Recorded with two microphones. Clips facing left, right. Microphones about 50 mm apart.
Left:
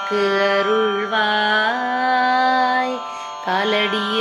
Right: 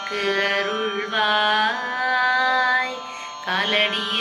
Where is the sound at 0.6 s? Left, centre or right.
Left.